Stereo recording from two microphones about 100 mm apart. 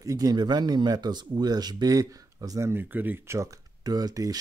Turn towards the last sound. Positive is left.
turn(degrees=-35)  # may be behind; listen again after turning